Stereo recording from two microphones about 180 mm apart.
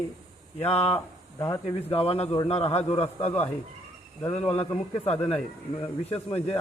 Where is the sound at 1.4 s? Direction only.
15° left (ahead or behind).